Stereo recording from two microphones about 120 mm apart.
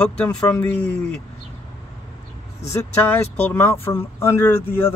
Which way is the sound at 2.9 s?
15° left (ahead or behind).